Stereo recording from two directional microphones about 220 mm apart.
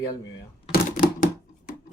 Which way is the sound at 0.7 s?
40° left (ahead or behind).